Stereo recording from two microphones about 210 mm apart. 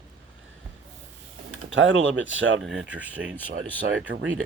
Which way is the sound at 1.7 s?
65° right (ahead or behind).